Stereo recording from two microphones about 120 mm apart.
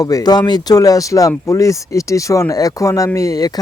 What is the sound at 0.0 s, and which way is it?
Speech, 30° left (ahead or behind).